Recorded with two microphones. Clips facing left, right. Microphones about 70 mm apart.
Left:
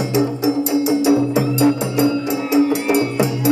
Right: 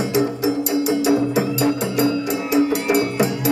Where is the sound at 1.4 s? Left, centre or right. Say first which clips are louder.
Left 3 dB; left.